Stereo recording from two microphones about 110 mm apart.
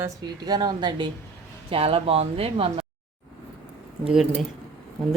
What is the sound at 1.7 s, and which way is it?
Speech, 60° right (ahead or behind).